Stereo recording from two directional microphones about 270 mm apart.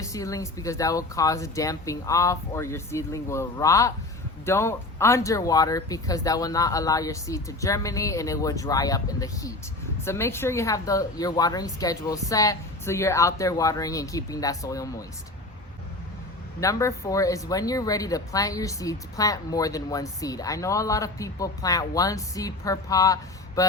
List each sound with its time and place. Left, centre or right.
0.0 s speech: centre
16.6 s speech: centre